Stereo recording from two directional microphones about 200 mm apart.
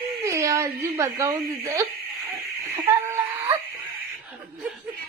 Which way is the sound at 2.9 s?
10° right (ahead or behind).